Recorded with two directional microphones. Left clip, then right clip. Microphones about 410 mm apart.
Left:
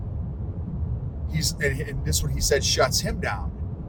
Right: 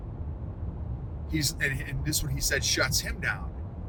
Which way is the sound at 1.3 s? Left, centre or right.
Centre.